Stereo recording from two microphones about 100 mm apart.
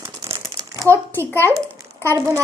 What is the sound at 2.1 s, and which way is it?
Speech, 30° right (ahead or behind).